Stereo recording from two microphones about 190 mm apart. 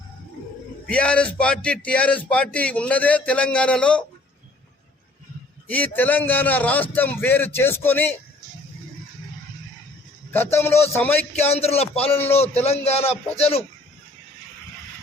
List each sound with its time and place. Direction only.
0.9 s speech: 5° left (ahead or behind)
5.6 s speech: 10° left (ahead or behind)
10.3 s speech: 10° left (ahead or behind)
11.3 s a man's voice: 35° left (ahead or behind)